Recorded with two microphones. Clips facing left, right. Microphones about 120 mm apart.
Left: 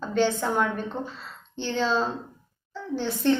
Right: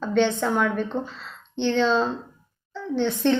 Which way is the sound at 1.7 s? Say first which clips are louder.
Right 3 dB; 5° left (ahead or behind).